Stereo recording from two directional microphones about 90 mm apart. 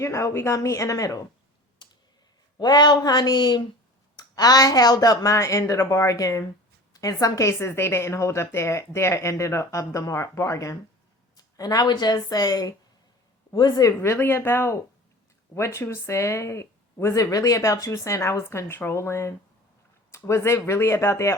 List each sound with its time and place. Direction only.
0.0 s a woman's voice: 35° left (ahead or behind)
1.8 s computer keyboard: 55° left (ahead or behind)
2.6 s a woman's voice: 50° left (ahead or behind)
14.0 s a woman's voice: 25° left (ahead or behind)